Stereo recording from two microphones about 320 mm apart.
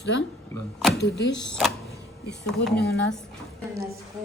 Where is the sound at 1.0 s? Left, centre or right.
Left.